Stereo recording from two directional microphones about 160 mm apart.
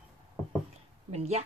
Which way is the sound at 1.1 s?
45° right (ahead or behind).